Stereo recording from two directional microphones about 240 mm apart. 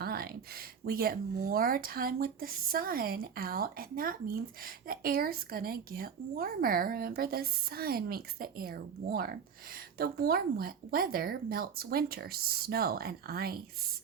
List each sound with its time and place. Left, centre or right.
0.0 s speech: right